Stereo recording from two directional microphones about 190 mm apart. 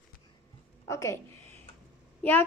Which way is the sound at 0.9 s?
15° left (ahead or behind).